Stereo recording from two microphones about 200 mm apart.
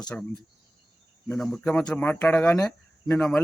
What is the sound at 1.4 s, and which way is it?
Speech, centre (ahead or behind).